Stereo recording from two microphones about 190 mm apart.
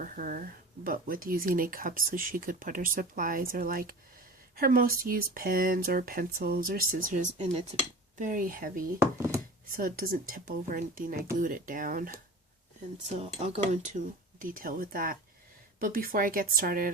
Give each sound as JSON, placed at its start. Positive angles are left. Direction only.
{"t": 0.0, "sound": "speech", "side_deg": -45}
{"t": 13.5, "sound": "speech", "side_deg": -40}